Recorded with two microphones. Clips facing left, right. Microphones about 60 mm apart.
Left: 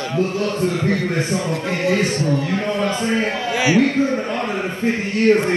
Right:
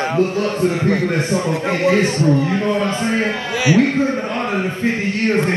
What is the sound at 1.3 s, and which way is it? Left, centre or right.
Speech, right.